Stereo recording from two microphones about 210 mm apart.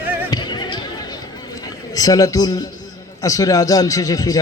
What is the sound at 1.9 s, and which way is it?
A man's voice, 15° left (ahead or behind).